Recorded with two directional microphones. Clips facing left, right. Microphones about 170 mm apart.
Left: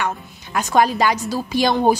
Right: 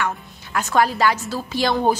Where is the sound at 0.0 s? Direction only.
15° left (ahead or behind).